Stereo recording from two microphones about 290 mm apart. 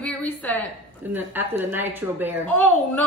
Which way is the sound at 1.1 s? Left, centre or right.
Centre.